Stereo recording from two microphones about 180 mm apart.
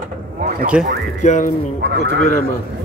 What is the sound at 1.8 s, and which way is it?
Speech, 70° right (ahead or behind).